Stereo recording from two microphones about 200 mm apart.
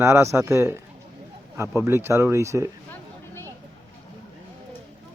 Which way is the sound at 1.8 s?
10° right (ahead or behind).